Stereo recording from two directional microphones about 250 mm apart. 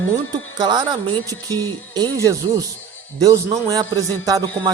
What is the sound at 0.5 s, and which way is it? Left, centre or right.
Music, centre.